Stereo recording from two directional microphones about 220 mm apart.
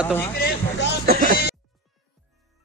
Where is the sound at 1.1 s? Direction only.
45° right (ahead or behind).